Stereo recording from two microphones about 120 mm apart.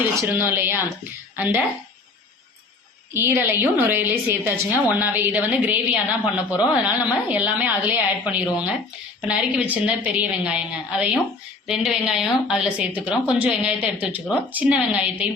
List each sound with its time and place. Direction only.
0.0 s a woman's voice: 15° right (ahead or behind)
3.1 s a woman's voice: 15° right (ahead or behind)